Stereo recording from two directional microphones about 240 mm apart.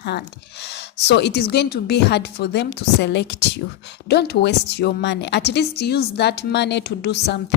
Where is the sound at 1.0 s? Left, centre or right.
Left.